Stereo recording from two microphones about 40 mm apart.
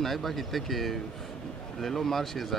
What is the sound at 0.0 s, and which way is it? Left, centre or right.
Speech, centre.